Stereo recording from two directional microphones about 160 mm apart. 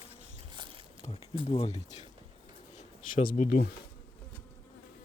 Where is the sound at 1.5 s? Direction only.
35° left (ahead or behind).